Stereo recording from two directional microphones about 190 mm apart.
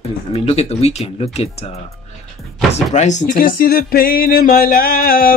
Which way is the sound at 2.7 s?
35° left (ahead or behind).